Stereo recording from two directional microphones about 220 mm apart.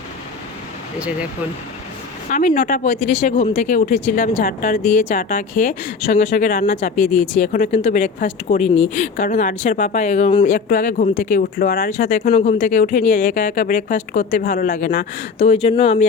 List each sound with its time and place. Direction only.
0.9 s speech: 5° right (ahead or behind)
2.3 s speech: 35° left (ahead or behind)